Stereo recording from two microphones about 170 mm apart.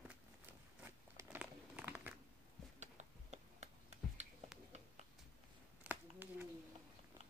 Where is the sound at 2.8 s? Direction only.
40° right (ahead or behind).